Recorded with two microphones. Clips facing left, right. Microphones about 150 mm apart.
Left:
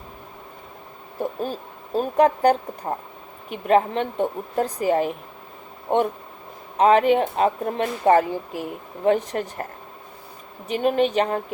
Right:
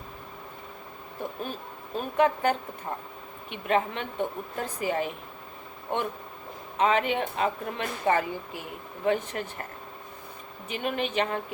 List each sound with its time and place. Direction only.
1.2 s speech: 35° left (ahead or behind)
6.7 s speech: 40° left (ahead or behind)
10.7 s speech: 40° left (ahead or behind)